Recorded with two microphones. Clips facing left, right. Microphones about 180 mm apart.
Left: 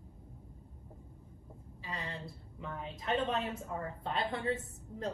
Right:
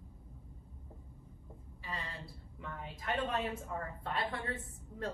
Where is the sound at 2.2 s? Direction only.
25° left (ahead or behind).